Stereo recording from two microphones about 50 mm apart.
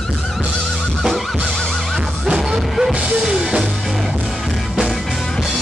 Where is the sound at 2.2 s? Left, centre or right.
Centre.